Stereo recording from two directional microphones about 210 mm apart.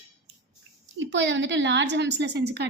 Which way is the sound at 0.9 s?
60° right (ahead or behind).